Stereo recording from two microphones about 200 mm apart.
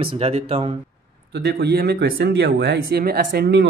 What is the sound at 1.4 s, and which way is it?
Speech, 55° right (ahead or behind).